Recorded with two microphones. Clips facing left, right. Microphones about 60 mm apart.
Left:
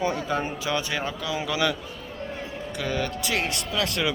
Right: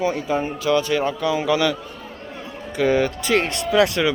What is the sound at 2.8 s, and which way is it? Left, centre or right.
Speech, centre.